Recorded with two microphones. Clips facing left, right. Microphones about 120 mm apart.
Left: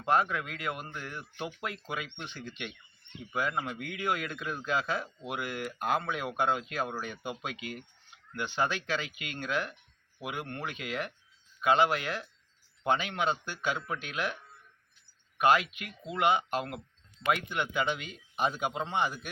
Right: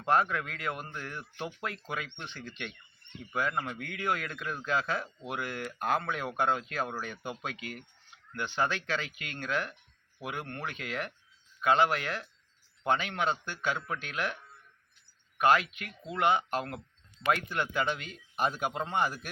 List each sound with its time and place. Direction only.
0.2 s a man's voice: 10° left (ahead or behind)
15.4 s a man's voice: 20° left (ahead or behind)
18.3 s a man's voice: centre (ahead or behind)